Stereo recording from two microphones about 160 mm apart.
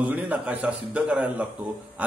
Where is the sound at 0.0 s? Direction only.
10° right (ahead or behind).